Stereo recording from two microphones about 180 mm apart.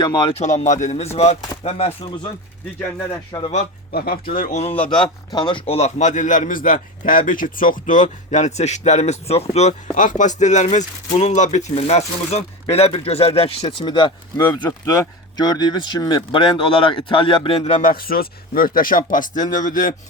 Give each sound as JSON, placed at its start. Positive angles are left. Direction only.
{"t": 0.0, "sound": "a man's voice", "side_deg": 25}
{"t": 3.3, "sound": "speech", "side_deg": 25}
{"t": 3.9, "sound": "speech", "side_deg": 55}
{"t": 4.6, "sound": "a man's voice", "side_deg": 30}
{"t": 17.8, "sound": "speech", "side_deg": 55}